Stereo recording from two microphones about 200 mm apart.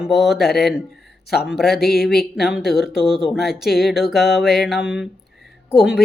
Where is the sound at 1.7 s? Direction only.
50° left (ahead or behind).